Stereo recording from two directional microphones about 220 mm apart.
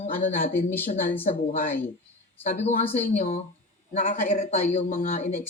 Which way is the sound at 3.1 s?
30° left (ahead or behind).